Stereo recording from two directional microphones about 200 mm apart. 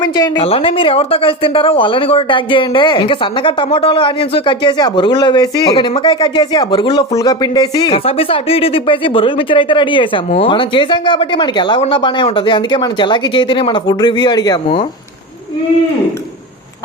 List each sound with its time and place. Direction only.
0.0 s speech: 20° left (ahead or behind)